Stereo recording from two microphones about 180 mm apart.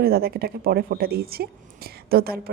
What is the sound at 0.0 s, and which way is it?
Speech, 60° right (ahead or behind).